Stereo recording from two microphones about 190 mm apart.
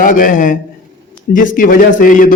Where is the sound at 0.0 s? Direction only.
45° left (ahead or behind).